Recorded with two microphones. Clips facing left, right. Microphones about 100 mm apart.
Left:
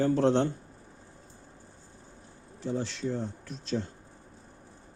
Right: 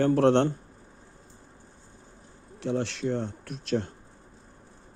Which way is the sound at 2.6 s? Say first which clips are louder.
Right 4 dB; 70° right (ahead or behind).